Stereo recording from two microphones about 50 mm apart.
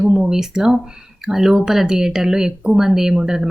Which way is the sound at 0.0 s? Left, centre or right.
Centre.